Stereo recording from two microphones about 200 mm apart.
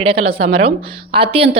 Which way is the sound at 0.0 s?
25° right (ahead or behind).